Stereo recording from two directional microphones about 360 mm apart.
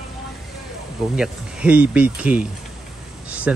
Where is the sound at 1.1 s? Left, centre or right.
Centre.